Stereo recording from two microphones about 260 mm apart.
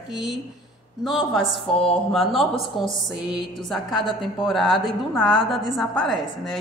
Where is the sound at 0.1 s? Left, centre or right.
Centre.